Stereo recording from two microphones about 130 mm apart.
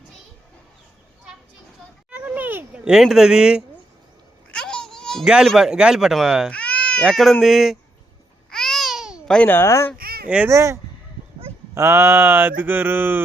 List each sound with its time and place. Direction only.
2.1 s cat: 10° right (ahead or behind)
4.5 s speech: 5° left (ahead or behind)
6.5 s speech: 10° left (ahead or behind)
8.4 s babbling: 5° left (ahead or behind)
9.2 s speech: 10° left (ahead or behind)
10.2 s speech: 10° right (ahead or behind)
10.5 s speech: 25° right (ahead or behind)